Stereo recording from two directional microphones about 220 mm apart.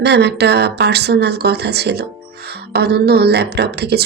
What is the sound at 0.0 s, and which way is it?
A woman's voice, 50° right (ahead or behind).